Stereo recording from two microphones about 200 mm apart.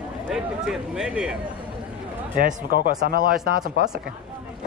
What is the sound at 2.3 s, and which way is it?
Speech, 45° right (ahead or behind).